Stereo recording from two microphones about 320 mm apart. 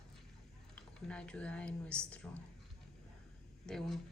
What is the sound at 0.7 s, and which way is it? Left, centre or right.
Speech, centre.